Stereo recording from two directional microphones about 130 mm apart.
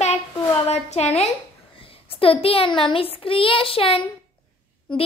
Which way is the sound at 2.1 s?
45° left (ahead or behind).